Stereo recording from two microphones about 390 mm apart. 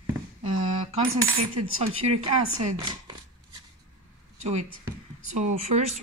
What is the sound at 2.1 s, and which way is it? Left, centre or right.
Speech, right.